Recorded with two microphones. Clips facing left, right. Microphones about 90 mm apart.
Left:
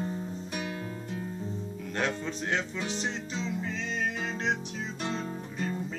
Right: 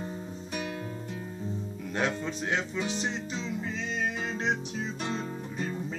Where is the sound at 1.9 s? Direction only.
15° right (ahead or behind).